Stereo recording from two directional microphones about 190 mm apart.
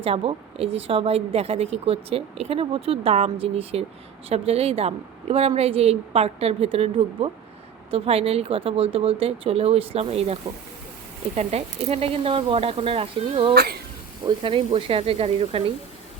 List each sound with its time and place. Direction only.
0.0 s a woman's voice: 30° right (ahead or behind)
11.3 s speech: 35° right (ahead or behind)
13.5 s speech: 55° right (ahead or behind)
14.3 s speech: 25° right (ahead or behind)